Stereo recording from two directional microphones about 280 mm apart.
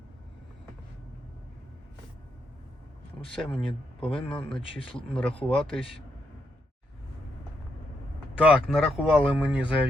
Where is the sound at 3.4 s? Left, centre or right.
Centre.